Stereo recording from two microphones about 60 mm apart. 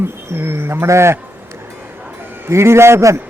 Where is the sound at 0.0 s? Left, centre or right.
Right.